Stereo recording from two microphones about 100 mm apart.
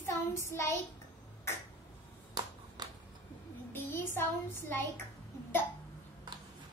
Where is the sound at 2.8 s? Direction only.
45° right (ahead or behind).